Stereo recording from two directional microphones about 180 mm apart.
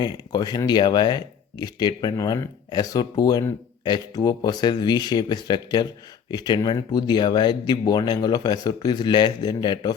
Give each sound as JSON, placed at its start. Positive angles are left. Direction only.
{"t": 0.0, "sound": "speech", "side_deg": 20}